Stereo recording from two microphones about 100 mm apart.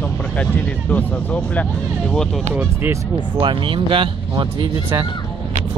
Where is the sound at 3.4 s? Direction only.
55° right (ahead or behind).